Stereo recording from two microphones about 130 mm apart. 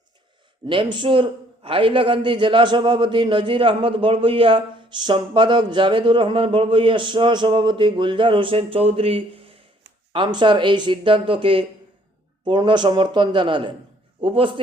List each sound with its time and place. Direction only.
0.7 s a man's voice: 40° right (ahead or behind)